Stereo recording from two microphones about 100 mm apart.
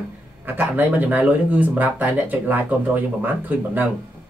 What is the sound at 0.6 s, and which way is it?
Speech, 15° right (ahead or behind).